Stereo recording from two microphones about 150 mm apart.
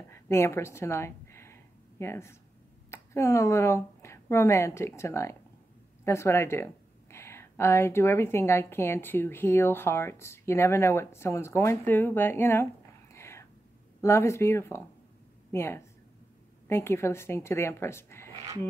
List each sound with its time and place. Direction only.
0.1 s a sound: 20° left (ahead or behind)
2.9 s a woman's voice: 20° left (ahead or behind)
13.1 s whispering: 20° left (ahead or behind)
14.0 s a woman's voice: 20° left (ahead or behind)